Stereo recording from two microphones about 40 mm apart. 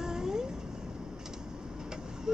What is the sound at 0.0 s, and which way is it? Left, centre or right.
Cat, centre.